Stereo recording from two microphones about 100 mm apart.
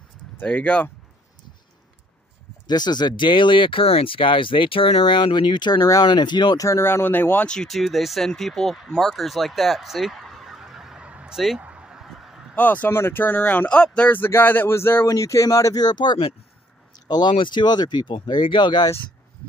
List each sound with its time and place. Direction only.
0.4 s speech: 10° left (ahead or behind)
2.6 s speech: 45° left (ahead or behind)
6.6 s speech: 25° left (ahead or behind); by 11.6 s 5° right (ahead or behind)
11.6 s honk: 10° right (ahead or behind)
12.5 s speech: 15° left (ahead or behind); by 18.9 s 50° left (ahead or behind)